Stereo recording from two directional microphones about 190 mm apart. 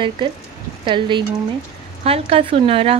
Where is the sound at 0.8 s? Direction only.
25° right (ahead or behind).